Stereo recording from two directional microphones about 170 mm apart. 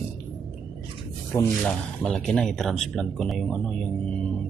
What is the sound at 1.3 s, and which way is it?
Speech, 15° left (ahead or behind).